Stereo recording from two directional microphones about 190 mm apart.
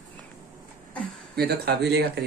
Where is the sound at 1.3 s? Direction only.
60° right (ahead or behind).